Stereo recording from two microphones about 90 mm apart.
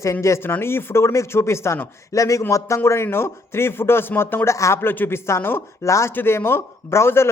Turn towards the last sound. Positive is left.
turn(degrees=30)  # may be behind; listen again after turning